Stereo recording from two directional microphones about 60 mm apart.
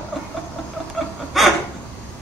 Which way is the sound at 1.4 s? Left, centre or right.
Centre.